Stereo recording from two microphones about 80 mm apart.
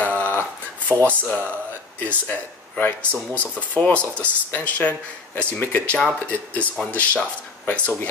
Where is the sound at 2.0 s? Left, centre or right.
Centre.